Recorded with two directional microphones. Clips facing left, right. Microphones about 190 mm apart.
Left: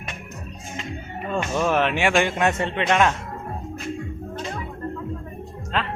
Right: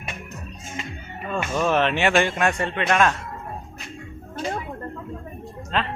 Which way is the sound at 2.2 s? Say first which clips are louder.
Left 1 dB; 25° left (ahead or behind).